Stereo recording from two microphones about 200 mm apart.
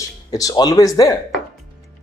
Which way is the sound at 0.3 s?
20° left (ahead or behind).